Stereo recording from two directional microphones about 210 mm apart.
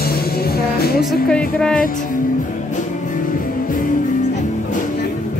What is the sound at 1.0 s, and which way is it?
Speech, 5° left (ahead or behind).